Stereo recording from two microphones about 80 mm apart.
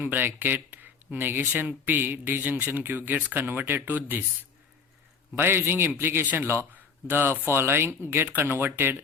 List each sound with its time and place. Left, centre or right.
0.0 s speech: right
5.3 s speech: right